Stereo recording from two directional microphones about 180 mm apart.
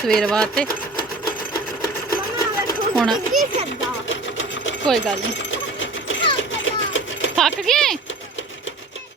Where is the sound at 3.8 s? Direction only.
90° left.